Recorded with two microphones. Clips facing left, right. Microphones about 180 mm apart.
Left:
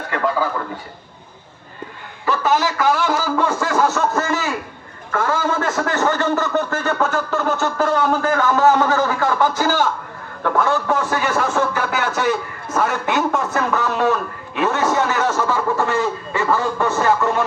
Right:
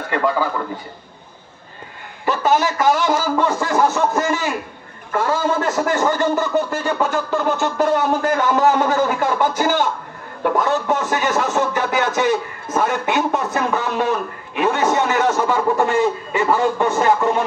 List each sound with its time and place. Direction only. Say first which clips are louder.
2.5 s a man's voice: right 2 dB; 20° right (ahead or behind)